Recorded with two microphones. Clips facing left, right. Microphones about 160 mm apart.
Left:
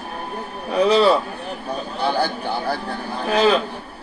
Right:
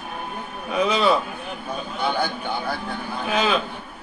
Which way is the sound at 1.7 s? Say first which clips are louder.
Left 3 dB; 35° left (ahead or behind).